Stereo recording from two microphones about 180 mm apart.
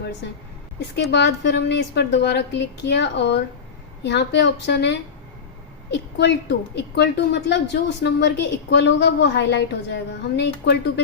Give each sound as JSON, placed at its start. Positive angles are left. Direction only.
{"t": 1.1, "sound": "a woman's voice", "side_deg": 75}